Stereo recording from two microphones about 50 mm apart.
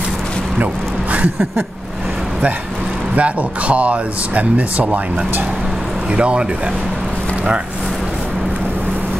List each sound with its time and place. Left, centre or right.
3.2 s speech: right
6.1 s speech: right